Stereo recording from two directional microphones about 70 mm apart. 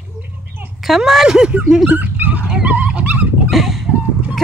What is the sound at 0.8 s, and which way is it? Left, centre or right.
Speech, centre.